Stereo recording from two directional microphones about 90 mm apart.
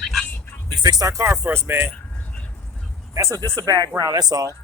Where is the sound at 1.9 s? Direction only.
15° left (ahead or behind).